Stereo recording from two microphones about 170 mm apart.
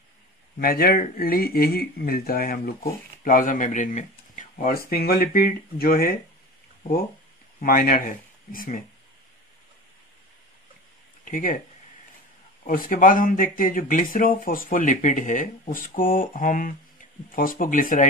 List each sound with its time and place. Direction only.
0.6 s speech: 60° left (ahead or behind)
7.6 s speech: 55° left (ahead or behind)
11.2 s speech: 50° left (ahead or behind)
12.6 s speech: 55° left (ahead or behind)